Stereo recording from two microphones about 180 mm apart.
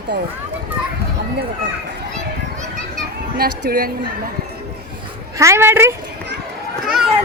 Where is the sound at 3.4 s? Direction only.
55° right (ahead or behind).